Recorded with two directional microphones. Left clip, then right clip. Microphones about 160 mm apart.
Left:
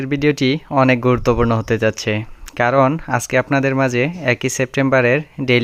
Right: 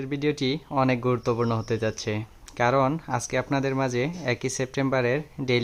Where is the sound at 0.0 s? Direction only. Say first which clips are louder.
Left 10 dB; 40° left (ahead or behind).